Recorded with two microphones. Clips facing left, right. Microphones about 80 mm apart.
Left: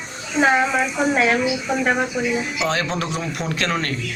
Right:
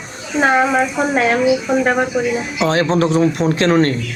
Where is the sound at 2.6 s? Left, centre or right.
Right.